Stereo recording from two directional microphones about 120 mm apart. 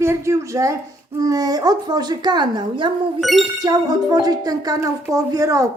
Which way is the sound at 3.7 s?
30° right (ahead or behind).